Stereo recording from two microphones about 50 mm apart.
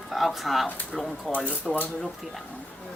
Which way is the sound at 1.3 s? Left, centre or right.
Left.